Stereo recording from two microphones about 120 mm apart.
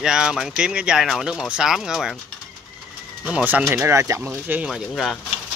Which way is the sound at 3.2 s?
10° right (ahead or behind).